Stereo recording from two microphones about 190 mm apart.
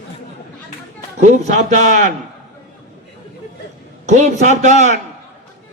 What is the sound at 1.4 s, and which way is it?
Speech, 40° right (ahead or behind).